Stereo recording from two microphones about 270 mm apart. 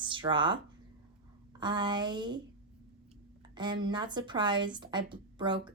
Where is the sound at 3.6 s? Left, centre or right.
Centre.